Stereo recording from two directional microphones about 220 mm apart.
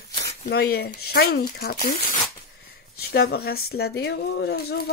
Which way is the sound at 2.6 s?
45° left (ahead or behind).